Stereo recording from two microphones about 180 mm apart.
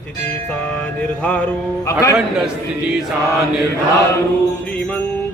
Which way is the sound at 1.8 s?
20° left (ahead or behind).